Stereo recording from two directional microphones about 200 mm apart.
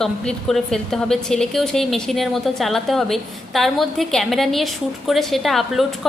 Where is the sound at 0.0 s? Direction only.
Centre (ahead or behind).